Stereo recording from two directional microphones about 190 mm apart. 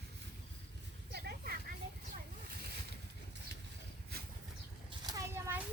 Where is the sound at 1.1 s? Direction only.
55° right (ahead or behind).